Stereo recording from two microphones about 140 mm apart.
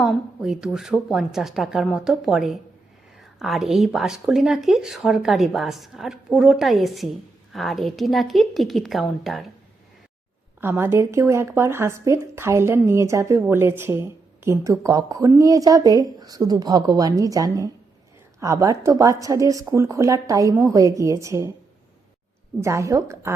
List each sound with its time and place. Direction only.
0.0 s speech: 5° right (ahead or behind)
10.6 s speech: 15° right (ahead or behind)
22.6 s speech: 20° right (ahead or behind)